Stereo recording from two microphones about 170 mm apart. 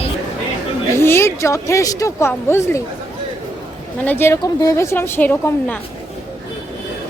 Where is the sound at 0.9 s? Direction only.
15° left (ahead or behind).